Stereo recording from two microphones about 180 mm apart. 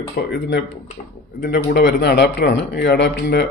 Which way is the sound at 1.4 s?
65° left (ahead or behind).